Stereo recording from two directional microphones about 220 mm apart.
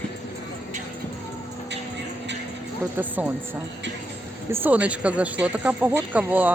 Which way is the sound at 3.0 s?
10° right (ahead or behind).